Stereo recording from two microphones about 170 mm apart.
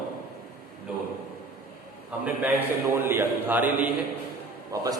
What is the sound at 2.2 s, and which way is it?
A man's voice, 10° right (ahead or behind).